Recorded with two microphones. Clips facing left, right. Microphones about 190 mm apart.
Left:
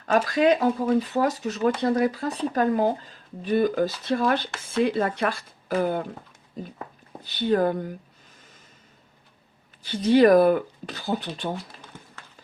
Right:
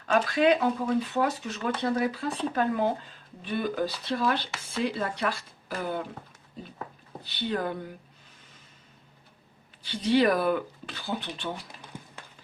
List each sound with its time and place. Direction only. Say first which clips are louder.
0.0 s speech: left 3 dB; 40° left (ahead or behind)
7.3 s speech: left 8 dB; 45° left (ahead or behind)
9.8 s speech: left 6 dB; 45° left (ahead or behind)